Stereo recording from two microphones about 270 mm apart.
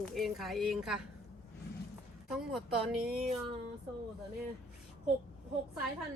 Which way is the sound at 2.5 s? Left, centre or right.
Centre.